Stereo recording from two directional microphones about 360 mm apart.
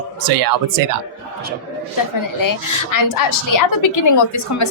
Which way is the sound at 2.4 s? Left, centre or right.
Left.